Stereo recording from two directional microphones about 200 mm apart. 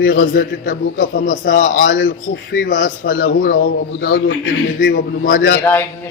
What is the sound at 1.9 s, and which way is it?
Speech, 75° left (ahead or behind).